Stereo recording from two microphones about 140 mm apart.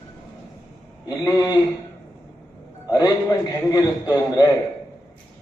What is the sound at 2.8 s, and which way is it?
A man's voice, 25° left (ahead or behind).